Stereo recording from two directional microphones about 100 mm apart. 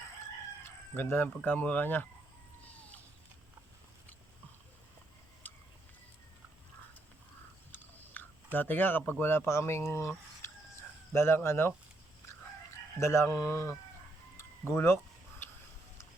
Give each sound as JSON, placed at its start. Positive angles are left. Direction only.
{"t": 0.6, "sound": "chicken", "side_deg": 25}
{"t": 1.4, "sound": "speech", "side_deg": 15}
{"t": 5.4, "sound": "a sound", "side_deg": 15}
{"t": 7.7, "sound": "biting", "side_deg": 20}
{"t": 8.5, "sound": "speech", "side_deg": 20}
{"t": 13.0, "sound": "speech", "side_deg": 25}
{"t": 14.3, "sound": "tick-tock", "side_deg": 25}